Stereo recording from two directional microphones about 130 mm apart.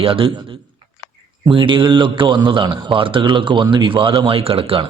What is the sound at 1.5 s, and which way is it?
A man's voice, 40° right (ahead or behind).